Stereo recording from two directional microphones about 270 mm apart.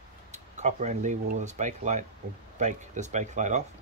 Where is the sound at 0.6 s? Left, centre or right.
Right.